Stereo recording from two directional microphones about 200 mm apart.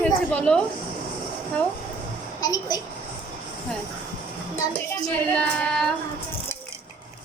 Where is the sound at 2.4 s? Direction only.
20° left (ahead or behind).